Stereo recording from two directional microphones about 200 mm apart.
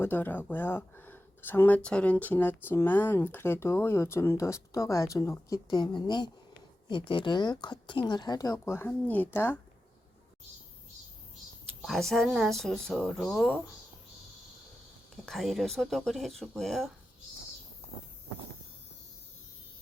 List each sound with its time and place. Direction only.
0.0 s speech: 10° left (ahead or behind)
11.8 s speech: centre (ahead or behind)
15.1 s speech: centre (ahead or behind)